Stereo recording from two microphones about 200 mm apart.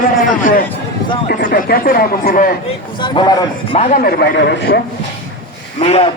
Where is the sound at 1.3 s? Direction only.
45° left (ahead or behind).